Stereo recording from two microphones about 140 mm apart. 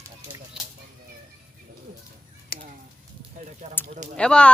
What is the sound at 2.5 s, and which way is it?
Speech, 90° left.